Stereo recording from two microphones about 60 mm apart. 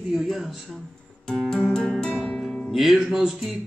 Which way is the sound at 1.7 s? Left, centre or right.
Centre.